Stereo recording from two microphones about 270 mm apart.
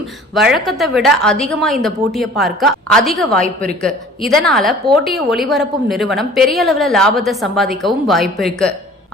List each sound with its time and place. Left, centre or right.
0.3 s a woman's voice: centre